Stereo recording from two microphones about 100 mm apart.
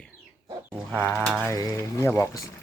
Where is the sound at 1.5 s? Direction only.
35° left (ahead or behind).